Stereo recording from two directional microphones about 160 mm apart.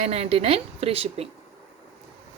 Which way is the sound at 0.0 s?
40° right (ahead or behind).